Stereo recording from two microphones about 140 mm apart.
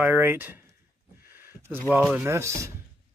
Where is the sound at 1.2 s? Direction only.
15° right (ahead or behind).